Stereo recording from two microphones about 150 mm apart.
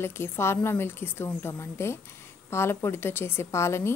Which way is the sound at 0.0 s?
15° left (ahead or behind).